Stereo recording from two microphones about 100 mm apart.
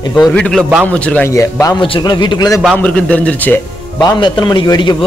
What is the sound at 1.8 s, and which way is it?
Speech, 55° left (ahead or behind).